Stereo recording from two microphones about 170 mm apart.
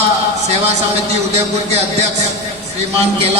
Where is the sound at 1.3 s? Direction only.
40° right (ahead or behind).